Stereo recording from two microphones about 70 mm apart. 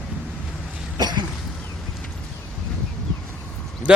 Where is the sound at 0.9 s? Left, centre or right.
Right.